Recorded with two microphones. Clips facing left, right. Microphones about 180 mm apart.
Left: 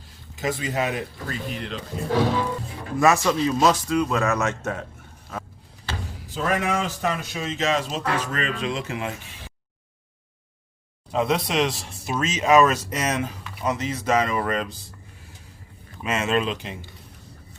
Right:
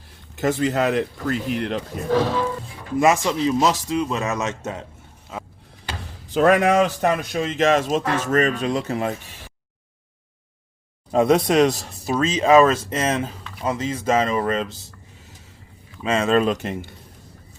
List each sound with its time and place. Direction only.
0.3 s speech: 65° right (ahead or behind)
3.0 s speech: 20° right (ahead or behind)
5.3 s vehicle: 15° right (ahead or behind)
6.3 s speech: 70° right (ahead or behind); by 9.1 s 40° right (ahead or behind)
11.1 s speech: 45° right (ahead or behind); by 14.8 s 25° right (ahead or behind)
16.0 s speech: 30° right (ahead or behind); by 16.9 s 45° right (ahead or behind)